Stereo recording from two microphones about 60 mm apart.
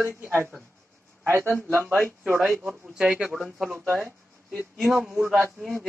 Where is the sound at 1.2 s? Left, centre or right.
Right.